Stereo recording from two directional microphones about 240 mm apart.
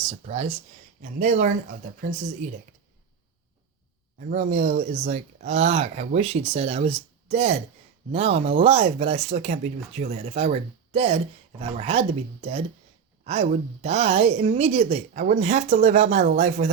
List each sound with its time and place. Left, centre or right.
0.3 s a woman's voice: right
4.3 s a woman's voice: right